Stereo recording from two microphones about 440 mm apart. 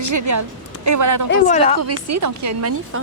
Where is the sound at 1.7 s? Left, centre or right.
Right.